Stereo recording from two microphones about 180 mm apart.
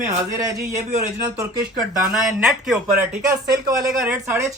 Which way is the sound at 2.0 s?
5° right (ahead or behind).